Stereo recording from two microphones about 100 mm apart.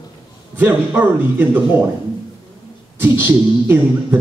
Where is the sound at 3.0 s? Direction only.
20° right (ahead or behind).